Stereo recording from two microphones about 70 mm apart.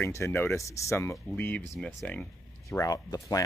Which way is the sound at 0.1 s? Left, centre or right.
Left.